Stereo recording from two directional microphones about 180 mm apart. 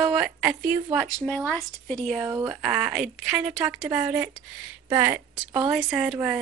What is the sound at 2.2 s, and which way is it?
A woman's voice, 10° right (ahead or behind).